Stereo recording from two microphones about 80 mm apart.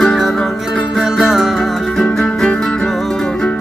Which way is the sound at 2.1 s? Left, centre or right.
Centre.